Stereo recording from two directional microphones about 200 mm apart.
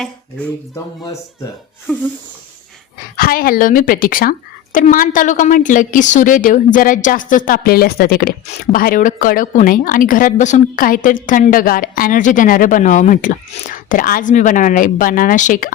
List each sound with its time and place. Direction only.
3.2 s a woman's voice: 45° left (ahead or behind)